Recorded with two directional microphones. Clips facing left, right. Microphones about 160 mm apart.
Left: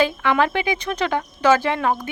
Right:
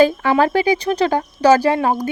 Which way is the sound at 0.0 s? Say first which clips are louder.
Right 5 dB; 40° right (ahead or behind).